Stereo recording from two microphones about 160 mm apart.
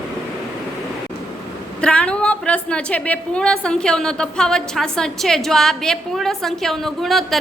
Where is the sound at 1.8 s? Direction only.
5° left (ahead or behind).